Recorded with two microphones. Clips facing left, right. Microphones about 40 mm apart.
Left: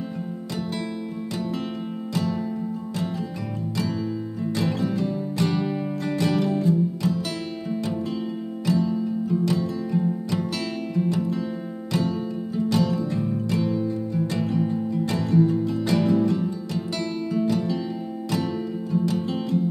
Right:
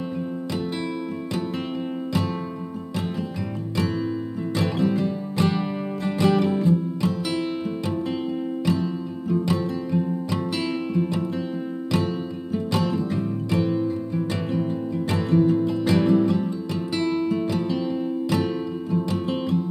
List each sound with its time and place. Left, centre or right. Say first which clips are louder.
4.6 s music: right 3 dB; right
8.6 s music: left 5 dB; right